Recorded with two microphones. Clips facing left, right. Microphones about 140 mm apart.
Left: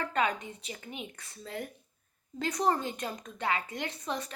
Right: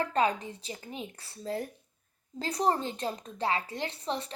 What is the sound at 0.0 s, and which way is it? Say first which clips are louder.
A woman's voice: right 3 dB; 35° right (ahead or behind).